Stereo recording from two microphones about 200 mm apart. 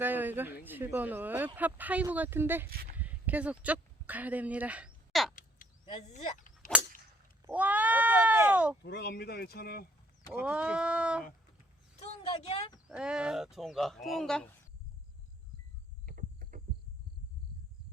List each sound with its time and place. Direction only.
0.0 s speech: 10° right (ahead or behind)
2.6 s speech: 50° right (ahead or behind)
2.9 s a sound: 10° right (ahead or behind)
5.3 s crow: 40° left (ahead or behind)
5.8 s a sound: 30° left (ahead or behind)
7.4 s sheep: 10° right (ahead or behind)
8.8 s speech: 55° left (ahead or behind)
10.3 s speech: 5° right (ahead or behind)
11.9 s speech: 30° left (ahead or behind)
12.9 s speech: 5° right (ahead or behind)
16.0 s a sound: 45° right (ahead or behind)